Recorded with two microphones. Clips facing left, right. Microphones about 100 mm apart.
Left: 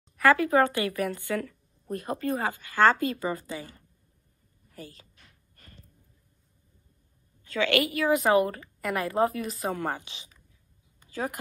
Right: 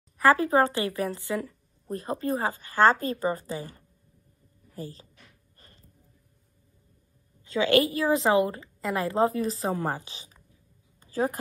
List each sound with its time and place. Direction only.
0.2 s a woman's voice: 30° right (ahead or behind)
7.6 s a woman's voice: 30° right (ahead or behind)
11.0 s a sound: 40° right (ahead or behind)